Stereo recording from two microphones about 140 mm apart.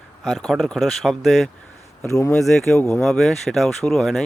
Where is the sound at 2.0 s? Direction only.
20° left (ahead or behind).